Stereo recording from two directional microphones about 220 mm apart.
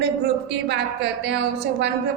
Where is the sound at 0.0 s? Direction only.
50° right (ahead or behind).